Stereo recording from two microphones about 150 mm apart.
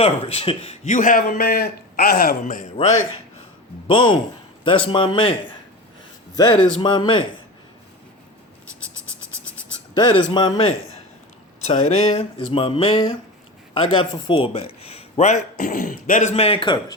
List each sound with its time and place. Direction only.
0.0 s speech: 40° left (ahead or behind)
0.9 s a man's voice: 60° left (ahead or behind); by 2.6 s 75° left (ahead or behind)
2.7 s a sound: 50° left (ahead or behind)
3.8 s speech: 35° left (ahead or behind)
6.3 s a man's voice: 30° left (ahead or behind)
9.9 s speech: 30° left (ahead or behind)
11.6 s a sound: 45° left (ahead or behind)
13.7 s speech: 35° left (ahead or behind); by 16.3 s 60° left (ahead or behind)
16.3 s speech: 40° left (ahead or behind)